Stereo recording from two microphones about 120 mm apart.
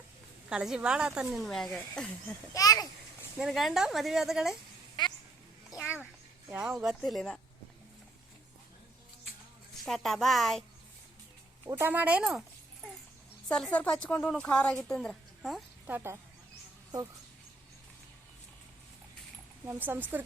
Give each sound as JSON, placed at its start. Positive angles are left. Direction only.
{"t": 0.5, "sound": "a woman's voice", "side_deg": -5}
{"t": 2.5, "sound": "a child's voice", "side_deg": 30}
{"t": 3.3, "sound": "speech", "side_deg": -5}
{"t": 6.5, "sound": "speech", "side_deg": -10}
{"t": 7.0, "sound": "speech", "side_deg": 5}
{"t": 9.8, "sound": "speech", "side_deg": 5}
{"t": 11.8, "sound": "speech", "side_deg": -15}
{"t": 12.3, "sound": "dog", "side_deg": 0}
{"t": 13.5, "sound": "a woman's voice", "side_deg": 10}
{"t": 15.9, "sound": "speech", "side_deg": -20}
{"t": 19.6, "sound": "speech", "side_deg": -15}